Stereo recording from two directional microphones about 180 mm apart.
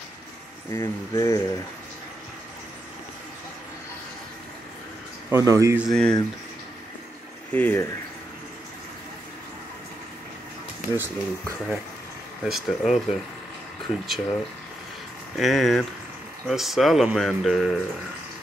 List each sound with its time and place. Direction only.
0.7 s speech: 15° left (ahead or behind)
5.3 s speech: 20° right (ahead or behind)
5.8 s speech: centre (ahead or behind)
7.5 s speech: 10° left (ahead or behind)
11.0 s speech: 10° right (ahead or behind)